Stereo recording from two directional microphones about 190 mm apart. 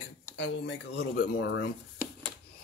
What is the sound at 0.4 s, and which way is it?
Speech, 60° left (ahead or behind).